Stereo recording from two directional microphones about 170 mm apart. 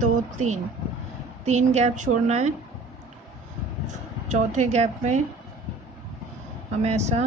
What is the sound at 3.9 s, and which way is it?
A woman's voice, 45° right (ahead or behind).